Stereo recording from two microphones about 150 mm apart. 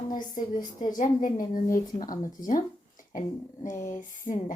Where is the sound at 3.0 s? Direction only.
60° left (ahead or behind).